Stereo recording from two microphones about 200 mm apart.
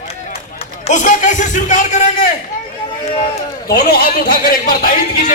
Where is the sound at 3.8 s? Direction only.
45° left (ahead or behind).